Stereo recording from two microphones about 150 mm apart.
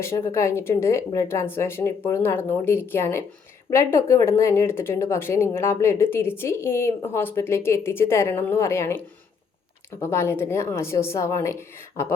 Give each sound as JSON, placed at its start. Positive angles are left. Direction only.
{"t": 0.0, "sound": "speech", "side_deg": 15}
{"t": 10.0, "sound": "speech", "side_deg": 15}